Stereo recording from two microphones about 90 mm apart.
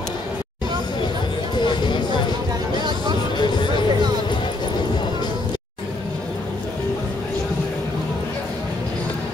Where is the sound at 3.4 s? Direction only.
60° left (ahead or behind).